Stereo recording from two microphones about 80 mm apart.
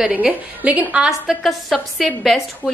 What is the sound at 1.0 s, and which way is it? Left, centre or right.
A woman's voice, centre.